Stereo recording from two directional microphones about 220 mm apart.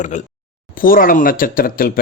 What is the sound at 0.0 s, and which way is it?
Speech, 35° left (ahead or behind).